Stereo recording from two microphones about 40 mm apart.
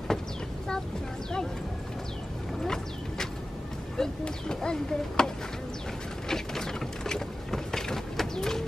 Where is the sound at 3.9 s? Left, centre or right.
Centre.